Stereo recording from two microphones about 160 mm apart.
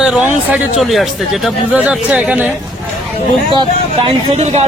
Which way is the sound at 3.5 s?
30° right (ahead or behind).